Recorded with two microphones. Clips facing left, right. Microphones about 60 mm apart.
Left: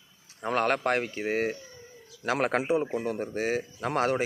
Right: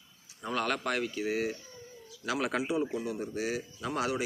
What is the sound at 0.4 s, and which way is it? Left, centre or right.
A man's voice, left.